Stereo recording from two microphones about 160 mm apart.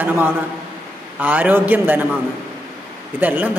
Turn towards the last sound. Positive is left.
turn(degrees=-10)  # may be behind; listen again after turning